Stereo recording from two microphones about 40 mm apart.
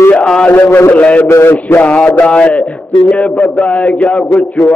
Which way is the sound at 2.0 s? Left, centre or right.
Left.